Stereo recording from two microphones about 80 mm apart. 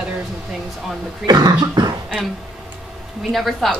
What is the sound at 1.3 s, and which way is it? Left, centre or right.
Cough, right.